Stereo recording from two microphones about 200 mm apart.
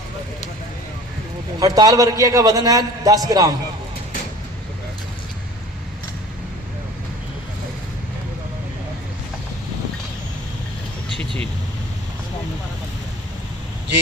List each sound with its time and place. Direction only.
1.5 s a man's voice: 20° right (ahead or behind)